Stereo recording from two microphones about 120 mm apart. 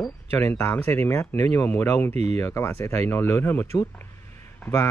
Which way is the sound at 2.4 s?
20° left (ahead or behind).